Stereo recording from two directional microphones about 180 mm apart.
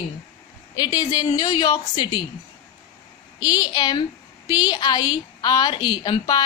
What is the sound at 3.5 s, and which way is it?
A woman's voice, 25° left (ahead or behind).